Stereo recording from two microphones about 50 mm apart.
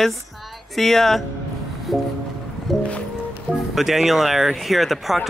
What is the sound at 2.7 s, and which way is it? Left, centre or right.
Music, centre.